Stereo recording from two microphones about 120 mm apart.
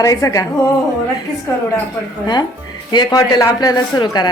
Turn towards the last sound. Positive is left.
turn(degrees=35)  # may be behind; listen again after turning